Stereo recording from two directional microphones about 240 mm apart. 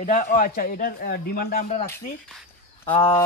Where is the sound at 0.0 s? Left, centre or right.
Left.